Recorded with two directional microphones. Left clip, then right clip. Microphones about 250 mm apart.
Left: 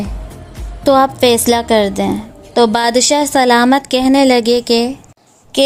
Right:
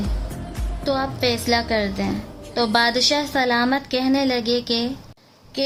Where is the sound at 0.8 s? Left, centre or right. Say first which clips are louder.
Left 12 dB; left.